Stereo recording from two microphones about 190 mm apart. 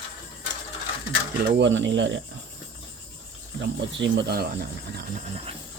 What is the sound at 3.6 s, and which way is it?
Speech, 65° right (ahead or behind).